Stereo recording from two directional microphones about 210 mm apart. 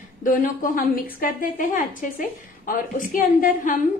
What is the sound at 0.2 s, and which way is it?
A woman's voice, 40° left (ahead or behind).